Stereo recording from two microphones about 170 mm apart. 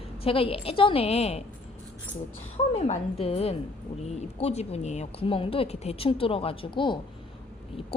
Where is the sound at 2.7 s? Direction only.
35° left (ahead or behind).